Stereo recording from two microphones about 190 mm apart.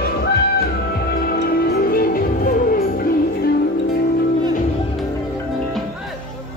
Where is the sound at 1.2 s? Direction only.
50° left (ahead or behind).